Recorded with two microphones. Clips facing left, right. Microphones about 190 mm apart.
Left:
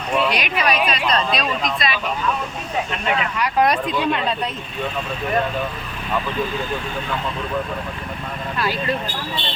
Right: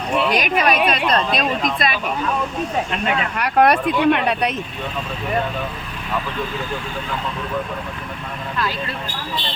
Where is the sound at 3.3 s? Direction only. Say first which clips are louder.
Right 4 dB; 60° right (ahead or behind).